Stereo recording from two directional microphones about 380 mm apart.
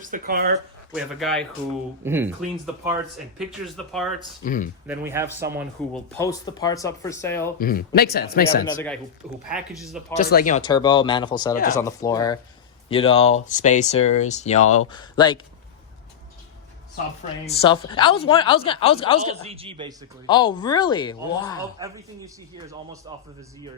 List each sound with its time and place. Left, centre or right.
0.0 s speech: right
0.9 s speech: centre
3.3 s speech: centre
4.4 s speech: left
4.9 s speech: centre
5.5 s speech: centre
7.6 s speech: left
8.6 s speech: centre
10.2 s speech: left
17.4 s speech: centre
19.4 s a man's voice: centre
20.2 s speech: centre
22.5 s a man's voice: centre